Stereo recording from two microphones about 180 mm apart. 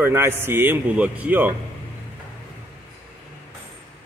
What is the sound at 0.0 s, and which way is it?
A man's voice, 15° right (ahead or behind).